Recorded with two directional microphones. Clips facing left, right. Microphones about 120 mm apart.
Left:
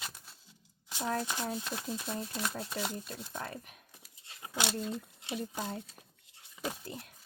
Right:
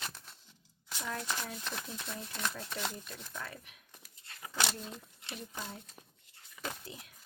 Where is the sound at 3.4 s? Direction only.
40° left (ahead or behind).